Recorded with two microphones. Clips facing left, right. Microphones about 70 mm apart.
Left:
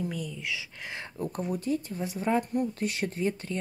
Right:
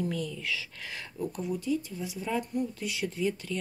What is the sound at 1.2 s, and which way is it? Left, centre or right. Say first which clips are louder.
Speech: left 1 dB; left.